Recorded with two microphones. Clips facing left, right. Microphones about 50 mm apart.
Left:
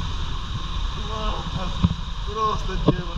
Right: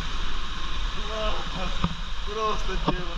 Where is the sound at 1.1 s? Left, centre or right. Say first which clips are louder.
Left 1 dB; right.